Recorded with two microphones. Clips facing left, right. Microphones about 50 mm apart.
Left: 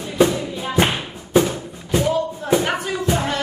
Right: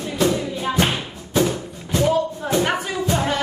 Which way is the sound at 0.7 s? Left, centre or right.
Left.